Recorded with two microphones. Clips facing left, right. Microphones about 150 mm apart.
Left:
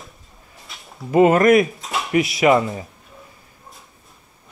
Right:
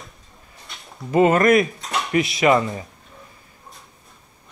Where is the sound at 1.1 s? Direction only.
20° left (ahead or behind).